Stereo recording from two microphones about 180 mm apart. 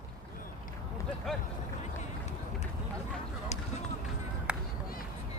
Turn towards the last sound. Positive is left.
turn(degrees=-5)  # may be behind; listen again after turning